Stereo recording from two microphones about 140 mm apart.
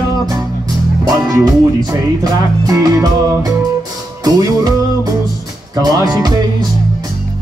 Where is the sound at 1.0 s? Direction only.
30° right (ahead or behind).